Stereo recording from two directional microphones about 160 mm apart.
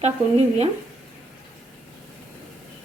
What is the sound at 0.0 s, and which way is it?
Speech, 40° right (ahead or behind).